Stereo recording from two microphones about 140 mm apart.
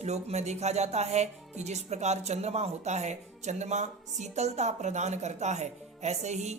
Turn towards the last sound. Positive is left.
turn(degrees=-55)  # may be behind; listen again after turning